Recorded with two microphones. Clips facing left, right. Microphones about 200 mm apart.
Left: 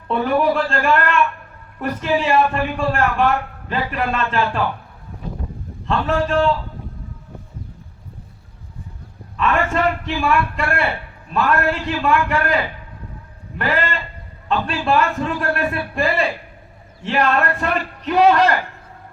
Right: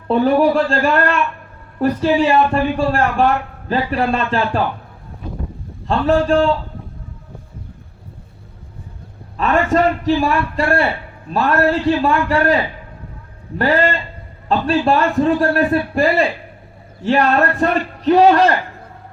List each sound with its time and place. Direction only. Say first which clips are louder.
0.1 s a man's voice: right 4 dB; 35° right (ahead or behind)
5.9 s a man's voice: right 5 dB; 35° right (ahead or behind)
9.4 s a man's voice: right 4 dB; 35° right (ahead or behind)
13.6 s a man's voice: right 6 dB; 35° right (ahead or behind)